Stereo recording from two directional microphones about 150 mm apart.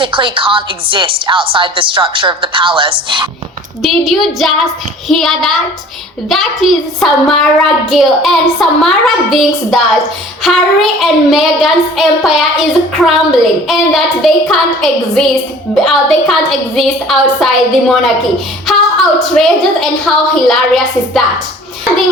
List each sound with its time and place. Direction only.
0.0 s a woman's voice: 35° right (ahead or behind)
3.8 s a woman's voice: centre (ahead or behind)
18.7 s a sound: centre (ahead or behind)
19.3 s a woman's voice: centre (ahead or behind)